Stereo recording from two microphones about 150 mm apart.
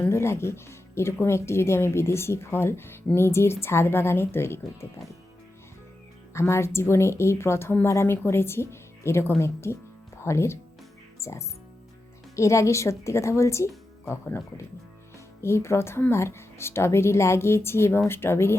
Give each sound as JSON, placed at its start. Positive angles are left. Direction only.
{"t": 0.0, "sound": "speech", "side_deg": 15}
{"t": 6.3, "sound": "speech", "side_deg": 20}